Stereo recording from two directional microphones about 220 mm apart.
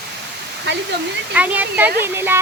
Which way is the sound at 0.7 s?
50° right (ahead or behind).